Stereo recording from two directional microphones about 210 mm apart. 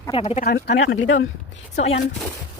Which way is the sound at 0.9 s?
65° left (ahead or behind).